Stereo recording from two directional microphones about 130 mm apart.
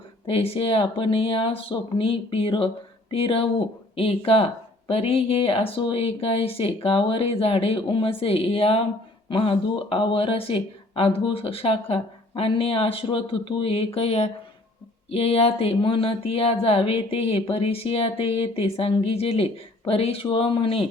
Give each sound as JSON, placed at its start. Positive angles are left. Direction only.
{"t": 0.3, "sound": "speech", "side_deg": 45}